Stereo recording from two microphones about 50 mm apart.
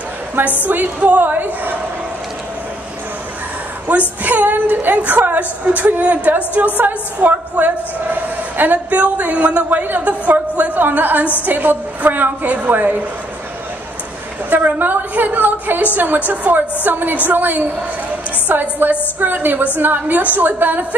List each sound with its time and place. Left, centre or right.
0.7 s a woman's voice: right
4.2 s a woman's voice: right
14.5 s a woman's voice: right